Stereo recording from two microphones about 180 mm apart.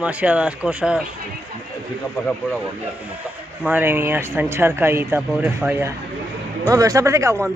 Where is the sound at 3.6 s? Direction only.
10° right (ahead or behind).